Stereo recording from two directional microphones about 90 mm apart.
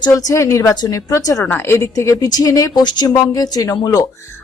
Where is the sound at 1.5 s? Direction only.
25° left (ahead or behind); by 2.8 s 40° left (ahead or behind).